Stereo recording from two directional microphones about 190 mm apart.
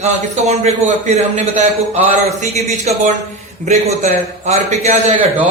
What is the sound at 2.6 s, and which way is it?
A man's voice, 35° right (ahead or behind).